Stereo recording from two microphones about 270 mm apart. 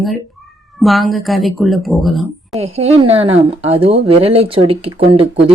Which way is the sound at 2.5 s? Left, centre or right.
Right.